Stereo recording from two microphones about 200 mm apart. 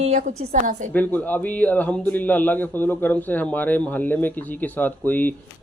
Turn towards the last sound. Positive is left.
turn(degrees=10)  # may be behind; listen again after turning